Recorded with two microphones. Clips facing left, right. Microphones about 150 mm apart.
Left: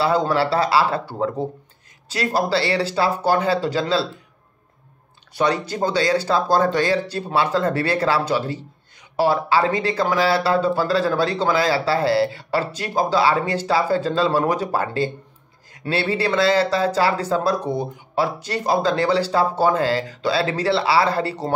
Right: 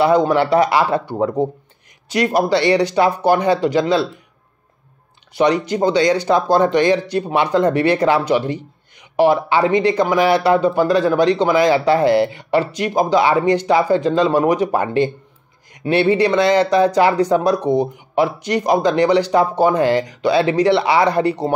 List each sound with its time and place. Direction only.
0.0 s speech: 15° right (ahead or behind)
5.7 s speech: 15° right (ahead or behind)